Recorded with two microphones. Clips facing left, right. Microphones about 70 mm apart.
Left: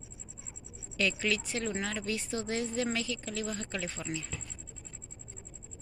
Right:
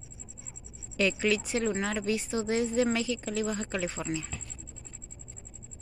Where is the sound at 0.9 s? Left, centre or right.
Centre.